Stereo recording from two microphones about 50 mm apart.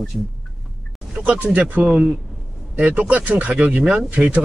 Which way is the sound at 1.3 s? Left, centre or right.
Right.